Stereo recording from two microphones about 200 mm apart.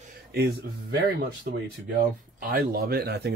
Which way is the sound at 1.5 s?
50° right (ahead or behind).